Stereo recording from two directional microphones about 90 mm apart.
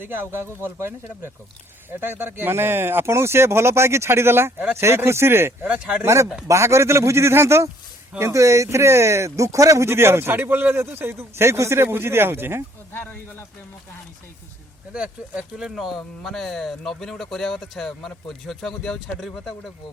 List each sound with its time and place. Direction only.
0.0 s speech: 25° right (ahead or behind)
5.6 s speech: 10° right (ahead or behind)
6.0 s a man's voice: 30° right (ahead or behind)
12.9 s speech: 25° left (ahead or behind)
14.9 s speech: 10° right (ahead or behind)